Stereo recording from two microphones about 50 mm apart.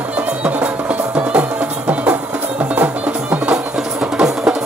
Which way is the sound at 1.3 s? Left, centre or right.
Right.